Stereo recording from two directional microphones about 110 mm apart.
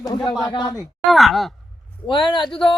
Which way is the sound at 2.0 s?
45° left (ahead or behind).